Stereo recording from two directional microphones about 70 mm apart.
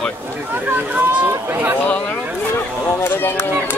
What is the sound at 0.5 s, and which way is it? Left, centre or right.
Speech, right.